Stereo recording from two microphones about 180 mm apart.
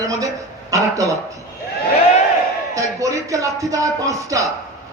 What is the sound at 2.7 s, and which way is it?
Speech, 20° right (ahead or behind).